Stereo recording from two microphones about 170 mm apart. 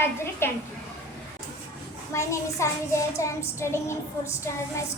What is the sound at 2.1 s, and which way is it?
A woman's voice, 15° left (ahead or behind).